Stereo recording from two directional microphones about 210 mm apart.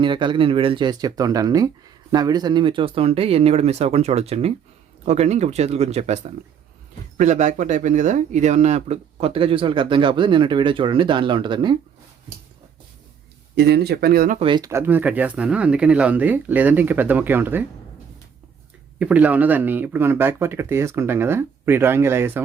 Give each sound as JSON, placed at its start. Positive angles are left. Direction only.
{"t": 0.0, "sound": "speech", "side_deg": -20}
{"t": 13.6, "sound": "speech", "side_deg": -50}
{"t": 14.3, "sound": "speech", "side_deg": -25}
{"t": 18.9, "sound": "speech", "side_deg": -5}